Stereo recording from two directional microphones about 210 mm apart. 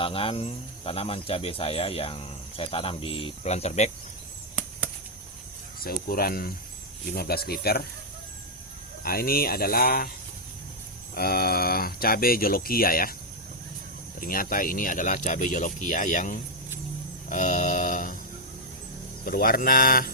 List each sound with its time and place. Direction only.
0.0 s speech: 25° left (ahead or behind)
5.8 s speech: 45° left (ahead or behind)
9.0 s speech: 45° left (ahead or behind)
11.1 s speech: 45° left (ahead or behind)
14.2 s speech: 40° left (ahead or behind)
17.2 s mantra: 35° left (ahead or behind)
19.2 s speech: 45° left (ahead or behind)